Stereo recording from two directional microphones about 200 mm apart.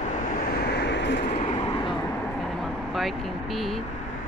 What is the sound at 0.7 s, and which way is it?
Vehicle, 60° left (ahead or behind).